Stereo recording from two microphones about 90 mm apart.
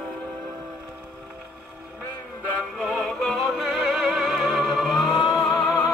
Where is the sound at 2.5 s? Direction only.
15° left (ahead or behind); by 5.5 s centre (ahead or behind).